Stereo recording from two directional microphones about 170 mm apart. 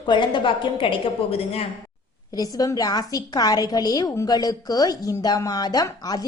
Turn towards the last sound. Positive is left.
turn(degrees=25)  # may be behind; listen again after turning